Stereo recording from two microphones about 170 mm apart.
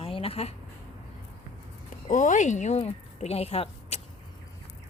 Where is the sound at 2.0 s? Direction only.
50° left (ahead or behind).